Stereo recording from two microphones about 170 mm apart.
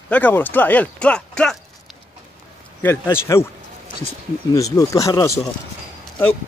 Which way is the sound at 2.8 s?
15° left (ahead or behind).